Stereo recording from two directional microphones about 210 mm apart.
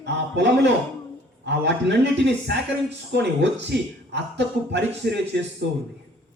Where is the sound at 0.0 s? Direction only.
60° right (ahead or behind).